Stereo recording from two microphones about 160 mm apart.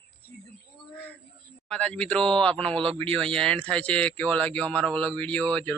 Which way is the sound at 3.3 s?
5° left (ahead or behind).